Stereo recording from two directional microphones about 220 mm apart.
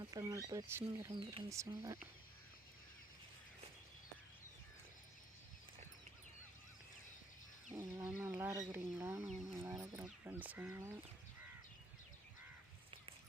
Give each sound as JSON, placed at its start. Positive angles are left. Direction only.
{"t": 0.0, "sound": "speech", "side_deg": -15}
{"t": 1.1, "sound": "speech", "side_deg": -25}
{"t": 7.7, "sound": "wild animals", "side_deg": -15}
{"t": 8.0, "sound": "speech", "side_deg": -10}
{"t": 9.6, "sound": "a sound", "side_deg": -15}